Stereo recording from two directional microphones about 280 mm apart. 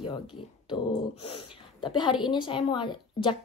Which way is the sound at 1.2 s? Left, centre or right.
Centre.